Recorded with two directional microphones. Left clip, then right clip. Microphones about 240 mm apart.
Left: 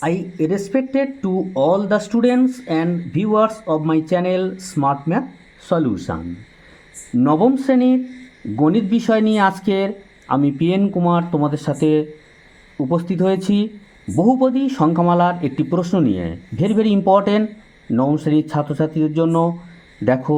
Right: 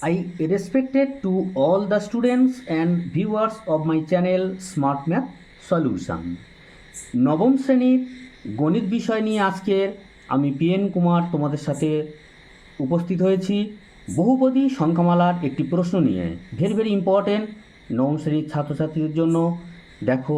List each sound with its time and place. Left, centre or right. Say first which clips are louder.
0.0 s speech: left 4 dB; left
7.2 s speech: left 4 dB; left